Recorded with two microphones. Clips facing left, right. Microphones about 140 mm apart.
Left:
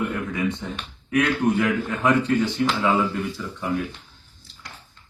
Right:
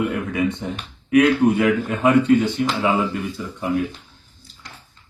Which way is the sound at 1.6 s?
20° right (ahead or behind).